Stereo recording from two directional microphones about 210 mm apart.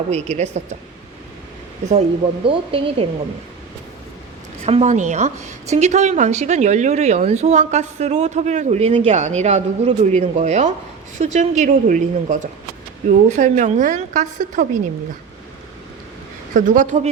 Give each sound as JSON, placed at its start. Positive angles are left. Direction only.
{"t": 0.1, "sound": "a woman's voice", "side_deg": -30}
{"t": 2.4, "sound": "speech", "side_deg": -25}
{"t": 4.6, "sound": "a woman's voice", "side_deg": -30}
{"t": 16.6, "sound": "a woman's voice", "side_deg": -40}